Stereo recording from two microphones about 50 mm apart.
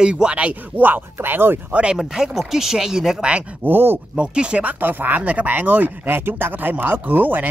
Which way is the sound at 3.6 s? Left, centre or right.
Right.